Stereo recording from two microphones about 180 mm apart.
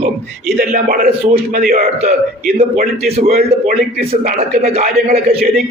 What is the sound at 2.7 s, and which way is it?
A man's voice, 40° right (ahead or behind).